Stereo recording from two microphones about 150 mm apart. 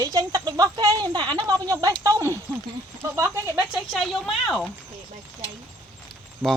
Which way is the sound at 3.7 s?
Centre (ahead or behind).